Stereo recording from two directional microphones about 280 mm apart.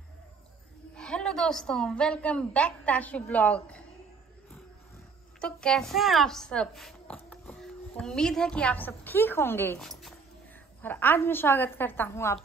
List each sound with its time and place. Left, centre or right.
0.9 s a woman's voice: centre
5.4 s a woman's voice: centre